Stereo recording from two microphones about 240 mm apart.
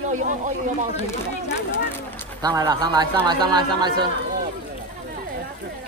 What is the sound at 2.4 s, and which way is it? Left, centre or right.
Speech, centre.